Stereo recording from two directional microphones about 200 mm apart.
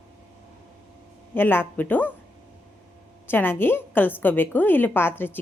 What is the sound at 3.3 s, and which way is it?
A woman's voice, 10° left (ahead or behind).